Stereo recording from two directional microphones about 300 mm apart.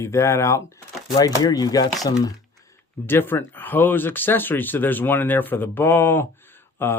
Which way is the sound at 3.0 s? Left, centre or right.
Centre.